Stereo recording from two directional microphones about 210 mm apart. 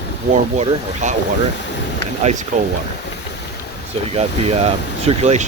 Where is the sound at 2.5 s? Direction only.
35° right (ahead or behind).